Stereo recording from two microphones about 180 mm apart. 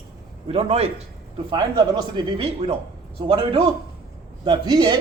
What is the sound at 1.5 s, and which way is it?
A man's voice, 25° right (ahead or behind).